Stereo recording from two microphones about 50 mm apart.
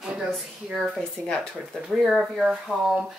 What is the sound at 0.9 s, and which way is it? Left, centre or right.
Speech, centre.